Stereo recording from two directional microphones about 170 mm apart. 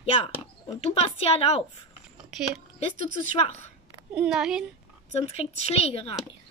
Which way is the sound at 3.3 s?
40° left (ahead or behind).